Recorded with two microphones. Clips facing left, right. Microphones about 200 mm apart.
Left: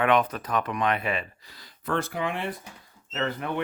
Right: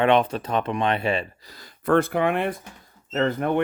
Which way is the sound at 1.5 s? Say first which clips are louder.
Right 9 dB; 50° right (ahead or behind).